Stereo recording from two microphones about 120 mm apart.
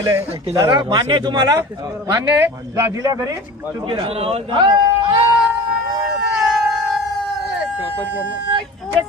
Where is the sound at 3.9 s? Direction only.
55° right (ahead or behind).